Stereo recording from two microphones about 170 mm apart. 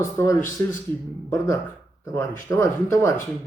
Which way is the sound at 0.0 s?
15° left (ahead or behind).